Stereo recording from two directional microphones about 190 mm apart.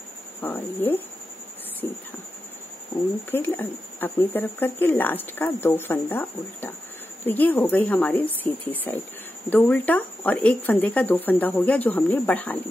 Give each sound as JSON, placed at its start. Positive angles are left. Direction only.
{"t": 0.4, "sound": "speech", "side_deg": 10}
{"t": 3.3, "sound": "speech", "side_deg": 10}